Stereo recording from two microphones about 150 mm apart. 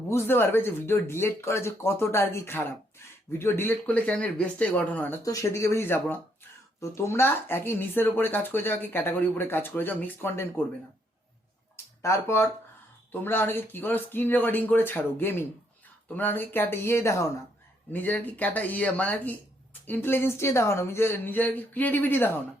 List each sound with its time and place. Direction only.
0.1 s speech: 15° left (ahead or behind)
12.0 s speech: 20° left (ahead or behind)